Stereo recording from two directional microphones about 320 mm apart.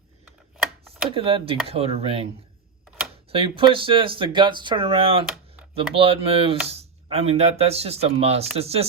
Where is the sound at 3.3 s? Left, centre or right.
Centre.